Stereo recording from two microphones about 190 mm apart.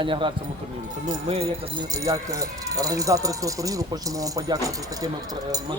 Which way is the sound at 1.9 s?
15° right (ahead or behind).